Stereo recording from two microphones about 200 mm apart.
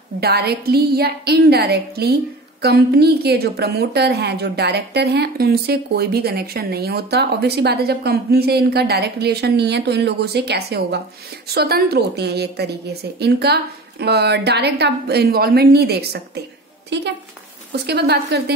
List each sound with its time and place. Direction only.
0.2 s a woman's voice: 50° right (ahead or behind)